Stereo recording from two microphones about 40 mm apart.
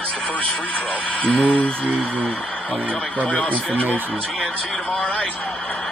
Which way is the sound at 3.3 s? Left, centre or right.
Left.